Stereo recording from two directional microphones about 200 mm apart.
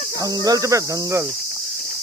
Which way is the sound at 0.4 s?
15° right (ahead or behind).